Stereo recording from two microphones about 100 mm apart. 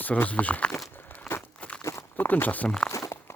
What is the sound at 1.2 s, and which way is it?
Crumpling, 20° left (ahead or behind).